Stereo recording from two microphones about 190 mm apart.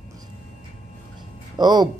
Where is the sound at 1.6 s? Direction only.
20° right (ahead or behind).